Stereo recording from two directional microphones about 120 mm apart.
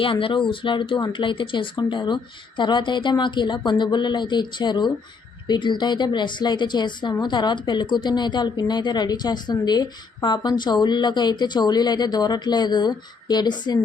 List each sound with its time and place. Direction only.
0.0 s a woman's voice: 45° left (ahead or behind)